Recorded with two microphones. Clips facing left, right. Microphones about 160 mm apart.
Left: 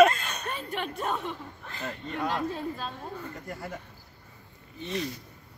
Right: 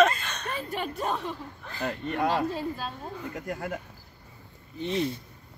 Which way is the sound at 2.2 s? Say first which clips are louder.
Right 3 dB; 5° right (ahead or behind).